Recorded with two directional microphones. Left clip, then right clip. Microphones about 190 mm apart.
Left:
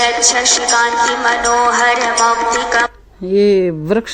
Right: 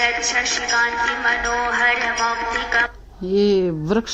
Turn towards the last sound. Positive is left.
turn(degrees=20)  # may be behind; listen again after turning